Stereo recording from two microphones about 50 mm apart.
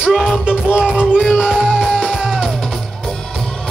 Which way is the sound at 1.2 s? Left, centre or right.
Centre.